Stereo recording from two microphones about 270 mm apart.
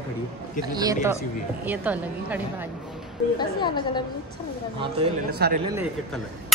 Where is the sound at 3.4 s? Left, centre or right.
Centre.